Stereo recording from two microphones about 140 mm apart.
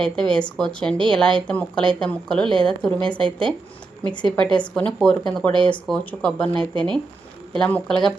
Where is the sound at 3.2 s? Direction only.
35° right (ahead or behind).